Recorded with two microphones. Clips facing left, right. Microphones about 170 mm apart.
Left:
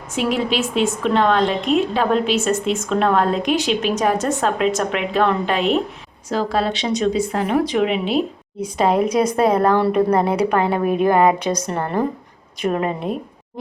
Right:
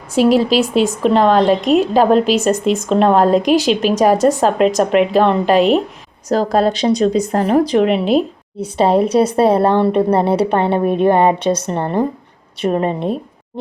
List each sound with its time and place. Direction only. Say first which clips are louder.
0.1 s a woman's voice: right 8 dB; 35° right (ahead or behind)